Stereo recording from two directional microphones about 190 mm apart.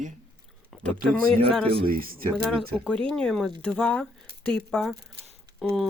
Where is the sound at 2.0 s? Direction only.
50° right (ahead or behind).